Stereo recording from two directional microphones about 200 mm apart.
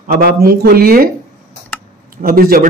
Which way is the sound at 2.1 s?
45° right (ahead or behind).